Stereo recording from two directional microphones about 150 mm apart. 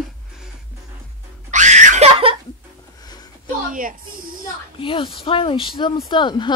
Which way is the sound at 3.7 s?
65° right (ahead or behind).